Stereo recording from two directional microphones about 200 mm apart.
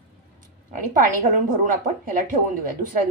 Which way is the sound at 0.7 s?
40° right (ahead or behind).